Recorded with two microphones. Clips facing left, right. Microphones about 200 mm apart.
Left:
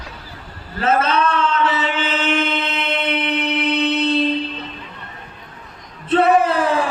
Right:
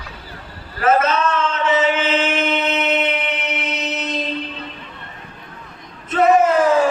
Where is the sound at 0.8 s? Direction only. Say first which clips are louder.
Right 1 dB; 30° left (ahead or behind).